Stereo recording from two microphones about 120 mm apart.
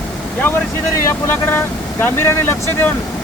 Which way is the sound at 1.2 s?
20° left (ahead or behind).